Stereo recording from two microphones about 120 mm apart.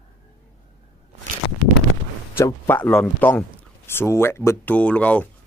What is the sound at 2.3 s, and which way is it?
A man's voice, 20° left (ahead or behind).